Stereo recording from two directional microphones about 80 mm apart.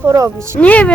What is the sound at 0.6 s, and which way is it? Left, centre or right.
Speech, centre.